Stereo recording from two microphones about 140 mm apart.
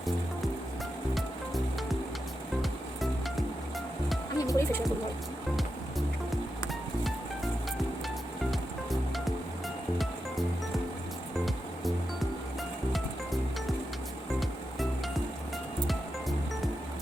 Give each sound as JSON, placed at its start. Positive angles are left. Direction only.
{"t": 1.1, "sound": "music", "side_deg": 0}
{"t": 4.4, "sound": "music", "side_deg": 20}
{"t": 8.4, "sound": "music", "side_deg": 0}
{"t": 11.3, "sound": "music", "side_deg": 0}